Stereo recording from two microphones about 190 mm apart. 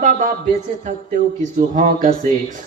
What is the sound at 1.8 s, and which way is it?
Speech, 40° right (ahead or behind).